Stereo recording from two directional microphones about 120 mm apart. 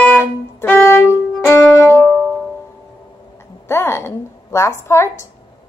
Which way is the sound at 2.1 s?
10° right (ahead or behind).